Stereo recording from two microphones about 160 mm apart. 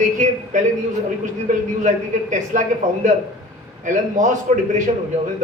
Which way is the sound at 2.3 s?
50° right (ahead or behind).